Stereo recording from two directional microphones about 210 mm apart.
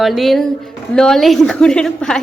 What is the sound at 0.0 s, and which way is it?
A woman's voice, centre (ahead or behind).